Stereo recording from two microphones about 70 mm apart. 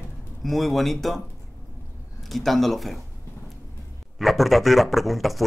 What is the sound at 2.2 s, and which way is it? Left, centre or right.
Speech, centre.